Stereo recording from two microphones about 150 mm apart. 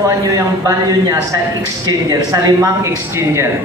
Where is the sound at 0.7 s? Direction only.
20° right (ahead or behind).